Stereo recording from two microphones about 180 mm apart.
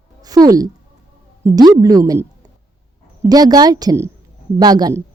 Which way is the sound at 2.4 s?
20° right (ahead or behind).